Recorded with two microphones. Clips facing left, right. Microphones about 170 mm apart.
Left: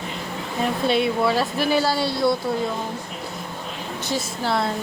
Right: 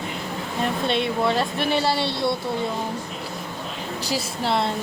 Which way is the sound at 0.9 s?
5° left (ahead or behind).